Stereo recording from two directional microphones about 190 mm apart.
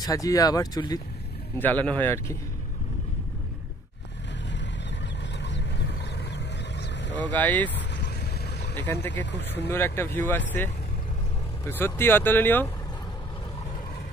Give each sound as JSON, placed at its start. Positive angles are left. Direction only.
{"t": 0.0, "sound": "speech", "side_deg": 15}
{"t": 1.6, "sound": "speech", "side_deg": 10}
{"t": 5.4, "sound": "vehicle", "side_deg": 65}
{"t": 7.2, "sound": "speech", "side_deg": 10}
{"t": 7.7, "sound": "vehicle", "side_deg": 65}
{"t": 9.1, "sound": "speech", "side_deg": 70}
{"t": 9.7, "sound": "speech", "side_deg": 10}